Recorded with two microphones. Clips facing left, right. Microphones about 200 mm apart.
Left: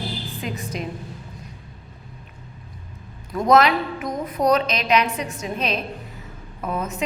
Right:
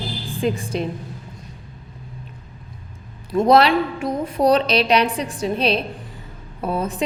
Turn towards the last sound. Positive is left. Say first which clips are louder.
# right 4 dB
turn(degrees=-30)  # may be behind; listen again after turning